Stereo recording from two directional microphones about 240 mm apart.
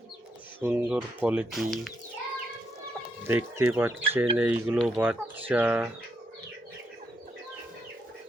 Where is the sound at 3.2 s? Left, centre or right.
Centre.